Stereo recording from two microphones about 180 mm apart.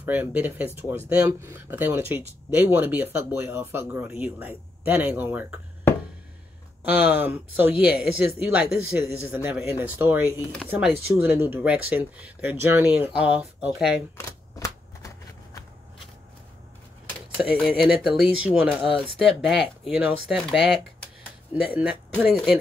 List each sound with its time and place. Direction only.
0.0 s speech: 10° right (ahead or behind)
7.1 s speech: 10° right (ahead or behind)
14.1 s shuffling cards: 20° left (ahead or behind)
17.4 s speech: centre (ahead or behind)